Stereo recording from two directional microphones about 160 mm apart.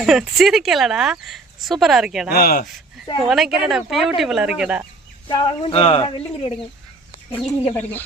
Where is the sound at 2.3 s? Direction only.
70° left (ahead or behind).